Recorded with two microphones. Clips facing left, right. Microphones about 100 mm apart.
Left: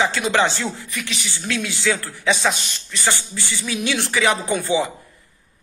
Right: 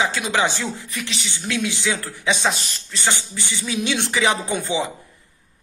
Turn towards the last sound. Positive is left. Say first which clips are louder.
# left 3 dB
turn(degrees=-20)  # may be behind; listen again after turning